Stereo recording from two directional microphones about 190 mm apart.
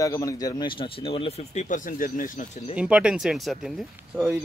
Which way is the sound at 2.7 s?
5° right (ahead or behind).